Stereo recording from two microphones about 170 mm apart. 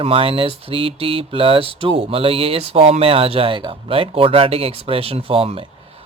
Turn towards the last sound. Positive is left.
turn(degrees=-35)  # may be behind; listen again after turning